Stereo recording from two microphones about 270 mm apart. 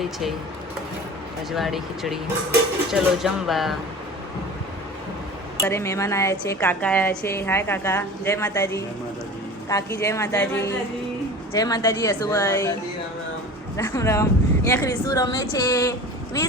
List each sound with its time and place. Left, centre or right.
0.0 s speech: centre
1.5 s speech: centre
5.5 s a woman's voice: centre
13.7 s speech: centre